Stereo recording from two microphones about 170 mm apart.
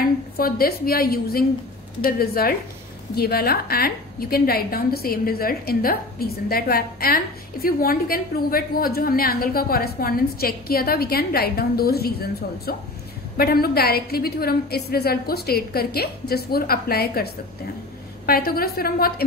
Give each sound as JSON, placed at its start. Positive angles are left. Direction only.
{"t": 0.0, "sound": "a woman's voice", "side_deg": 60}